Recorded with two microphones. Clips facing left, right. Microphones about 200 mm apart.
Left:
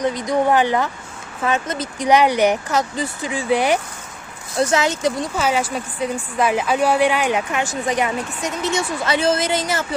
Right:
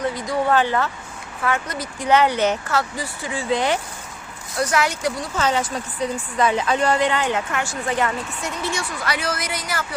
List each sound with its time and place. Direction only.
0.0 s a woman's voice: 20° left (ahead or behind)
4.6 s speech: 25° left (ahead or behind)
5.4 s a woman's voice: 10° left (ahead or behind); by 9.8 s 25° left (ahead or behind)